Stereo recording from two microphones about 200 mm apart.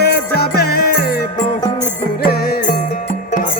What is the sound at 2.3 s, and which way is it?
Music, 50° left (ahead or behind).